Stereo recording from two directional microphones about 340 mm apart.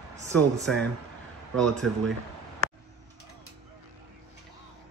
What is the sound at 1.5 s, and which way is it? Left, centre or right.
Speech, centre.